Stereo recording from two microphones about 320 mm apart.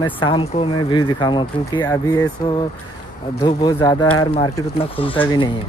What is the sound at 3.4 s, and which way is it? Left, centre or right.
Speech, centre.